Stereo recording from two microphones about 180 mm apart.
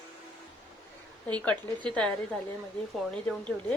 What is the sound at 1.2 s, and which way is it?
A woman's voice, 5° left (ahead or behind).